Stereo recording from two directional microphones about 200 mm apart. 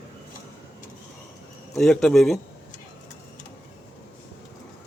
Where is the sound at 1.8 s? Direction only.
Centre (ahead or behind).